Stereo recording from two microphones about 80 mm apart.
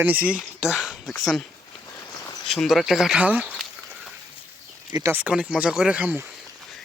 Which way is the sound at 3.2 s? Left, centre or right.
Centre.